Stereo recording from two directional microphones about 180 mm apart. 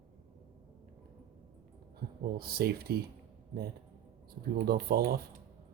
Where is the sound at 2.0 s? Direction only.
60° right (ahead or behind).